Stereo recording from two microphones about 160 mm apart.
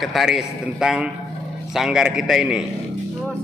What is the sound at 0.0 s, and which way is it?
Speech, centre (ahead or behind).